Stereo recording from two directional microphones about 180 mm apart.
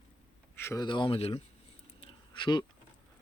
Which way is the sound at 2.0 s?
25° left (ahead or behind).